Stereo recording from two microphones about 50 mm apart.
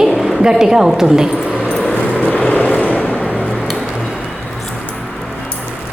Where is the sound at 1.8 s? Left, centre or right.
Left.